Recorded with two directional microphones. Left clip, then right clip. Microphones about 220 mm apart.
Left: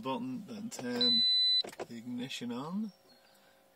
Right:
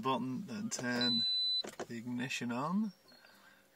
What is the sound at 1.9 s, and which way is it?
Speech, 45° right (ahead or behind).